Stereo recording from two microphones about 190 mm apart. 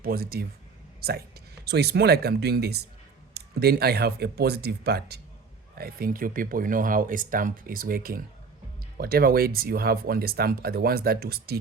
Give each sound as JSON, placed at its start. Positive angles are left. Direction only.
{"t": 0.0, "sound": "speech", "side_deg": -50}